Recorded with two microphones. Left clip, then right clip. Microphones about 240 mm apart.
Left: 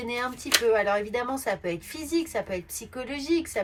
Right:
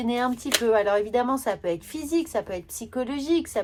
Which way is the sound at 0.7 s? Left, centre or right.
Centre.